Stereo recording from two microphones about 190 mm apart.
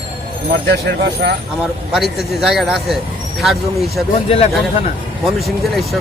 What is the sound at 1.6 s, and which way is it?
Speech, centre (ahead or behind).